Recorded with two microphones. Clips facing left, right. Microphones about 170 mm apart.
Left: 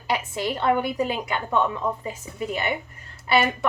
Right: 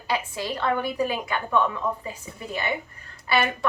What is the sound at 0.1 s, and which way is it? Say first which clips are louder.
A woman's voice: left 2 dB; 20° left (ahead or behind).